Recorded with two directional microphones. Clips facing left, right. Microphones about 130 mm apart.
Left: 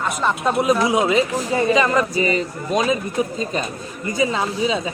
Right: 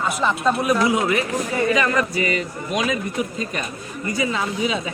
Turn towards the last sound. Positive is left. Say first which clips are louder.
# left 2 dB
turn(degrees=30)  # may be behind; listen again after turning